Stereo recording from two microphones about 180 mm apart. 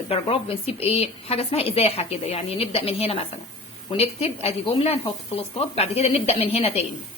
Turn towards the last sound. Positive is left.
turn(degrees=35)  # may be behind; listen again after turning